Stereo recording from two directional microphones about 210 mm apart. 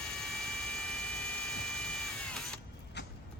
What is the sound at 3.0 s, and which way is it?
Vehicle, 55° left (ahead or behind).